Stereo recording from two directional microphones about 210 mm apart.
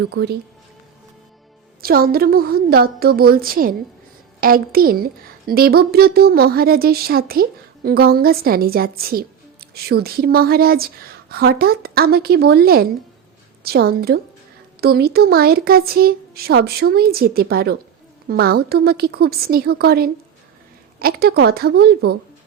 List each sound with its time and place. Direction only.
0.0 s a woman's voice: 55° right (ahead or behind)
1.8 s a woman's voice: 45° right (ahead or behind)